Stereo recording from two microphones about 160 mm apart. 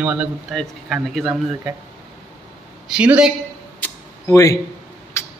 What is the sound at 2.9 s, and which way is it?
Speech, 5° right (ahead or behind).